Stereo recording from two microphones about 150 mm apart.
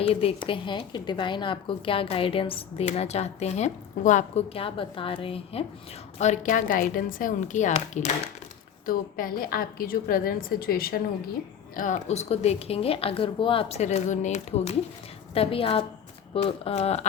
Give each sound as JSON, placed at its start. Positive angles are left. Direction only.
{"t": 0.0, "sound": "speech", "side_deg": 40}
{"t": 4.5, "sound": "speech", "side_deg": 35}
{"t": 6.1, "sound": "a woman's voice", "side_deg": 50}
{"t": 8.9, "sound": "a woman's voice", "side_deg": 70}
{"t": 11.8, "sound": "speech", "side_deg": 50}